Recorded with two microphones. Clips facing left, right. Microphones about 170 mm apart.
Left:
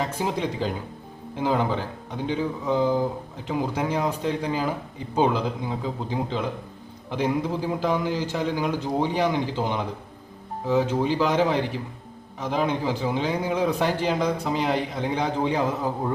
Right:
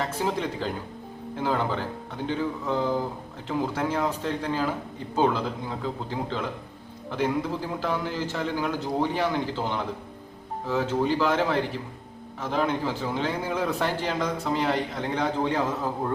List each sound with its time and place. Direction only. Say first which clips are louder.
0.2 s a man's voice: right 1 dB; 15° left (ahead or behind)
1.4 s a man's voice: left 3 dB; 15° left (ahead or behind)